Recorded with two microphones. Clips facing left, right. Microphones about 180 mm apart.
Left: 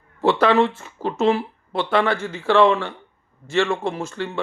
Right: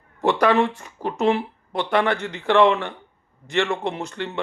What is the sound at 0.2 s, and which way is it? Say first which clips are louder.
A man's voice: left 2 dB; 15° right (ahead or behind).